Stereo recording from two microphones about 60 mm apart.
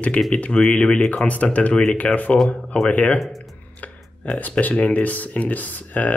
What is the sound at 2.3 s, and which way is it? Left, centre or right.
Speech, centre.